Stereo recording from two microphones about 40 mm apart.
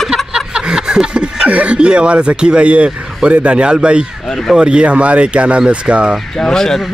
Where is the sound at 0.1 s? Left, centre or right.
Centre.